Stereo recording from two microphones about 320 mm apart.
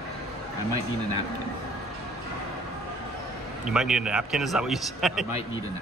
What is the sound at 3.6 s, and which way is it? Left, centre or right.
Speech, centre.